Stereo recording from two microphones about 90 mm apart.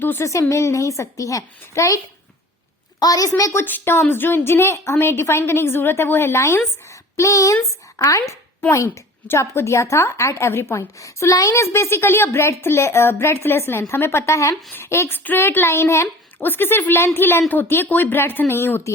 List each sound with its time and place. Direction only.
0.0 s a woman's voice: 20° left (ahead or behind)
0.3 s a woman's voice: 35° left (ahead or behind)
3.0 s a woman's voice: 40° left (ahead or behind)
3.6 s a woman's voice: 25° left (ahead or behind)